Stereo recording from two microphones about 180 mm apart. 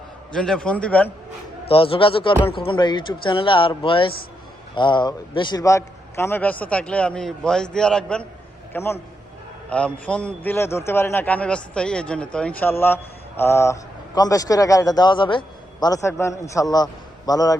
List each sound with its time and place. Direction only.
0.3 s a man's voice: 5° left (ahead or behind)
1.6 s a man's voice: 30° left (ahead or behind)